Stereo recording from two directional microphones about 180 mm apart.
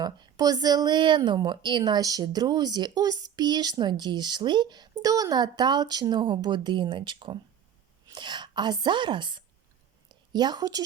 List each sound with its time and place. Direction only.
0.0 s a woman's voice: 20° right (ahead or behind)